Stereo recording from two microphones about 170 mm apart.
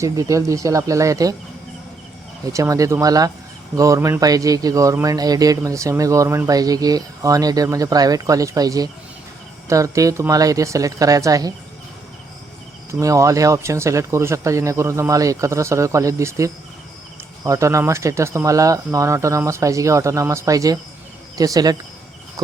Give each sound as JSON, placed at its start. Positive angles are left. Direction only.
{"t": 0.0, "sound": "speech", "side_deg": -20}
{"t": 2.5, "sound": "speech", "side_deg": -20}
{"t": 12.9, "sound": "speech", "side_deg": -20}